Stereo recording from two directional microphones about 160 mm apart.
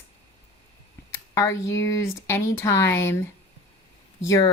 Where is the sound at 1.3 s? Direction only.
20° left (ahead or behind).